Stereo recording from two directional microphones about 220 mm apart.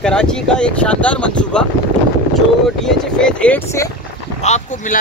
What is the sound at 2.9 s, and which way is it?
Speech, 5° left (ahead or behind).